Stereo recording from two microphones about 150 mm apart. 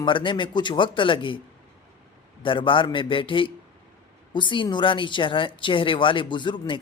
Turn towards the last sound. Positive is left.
turn(degrees=30)  # may be behind; listen again after turning